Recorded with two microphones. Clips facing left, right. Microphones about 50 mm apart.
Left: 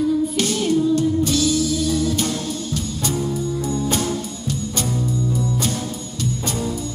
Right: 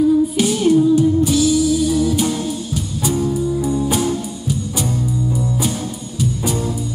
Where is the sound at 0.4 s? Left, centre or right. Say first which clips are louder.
Right 5 dB; centre.